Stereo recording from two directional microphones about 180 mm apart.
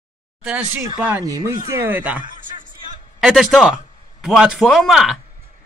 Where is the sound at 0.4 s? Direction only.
5° right (ahead or behind).